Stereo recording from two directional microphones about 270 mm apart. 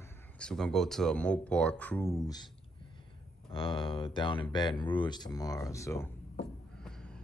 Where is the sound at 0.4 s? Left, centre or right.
Centre.